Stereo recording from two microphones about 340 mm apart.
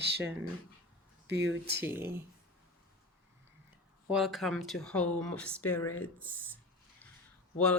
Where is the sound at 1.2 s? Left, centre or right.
Right.